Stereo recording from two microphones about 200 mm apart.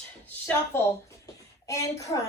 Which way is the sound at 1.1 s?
15° left (ahead or behind).